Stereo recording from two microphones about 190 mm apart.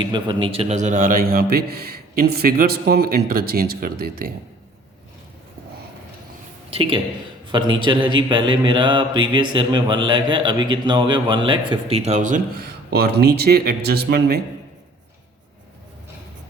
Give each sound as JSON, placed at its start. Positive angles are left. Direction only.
{"t": 0.0, "sound": "a man's voice", "side_deg": -25}
{"t": 6.7, "sound": "a man's voice", "side_deg": -30}
{"t": 12.9, "sound": "speech", "side_deg": -55}